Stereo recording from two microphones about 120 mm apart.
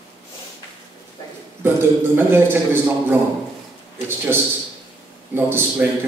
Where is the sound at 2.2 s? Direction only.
20° right (ahead or behind).